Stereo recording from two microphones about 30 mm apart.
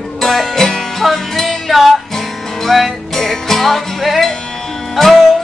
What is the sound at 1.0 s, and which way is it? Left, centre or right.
Music, centre.